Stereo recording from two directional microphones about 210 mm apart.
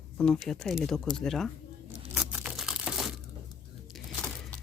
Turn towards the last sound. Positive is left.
turn(degrees=5)  # may be behind; listen again after turning